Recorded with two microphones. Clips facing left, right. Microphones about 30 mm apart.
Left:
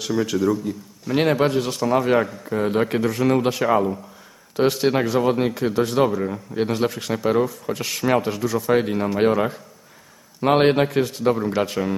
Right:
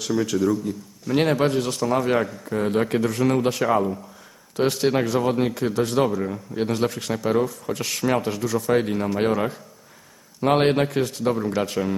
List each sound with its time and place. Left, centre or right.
0.0 s speech: centre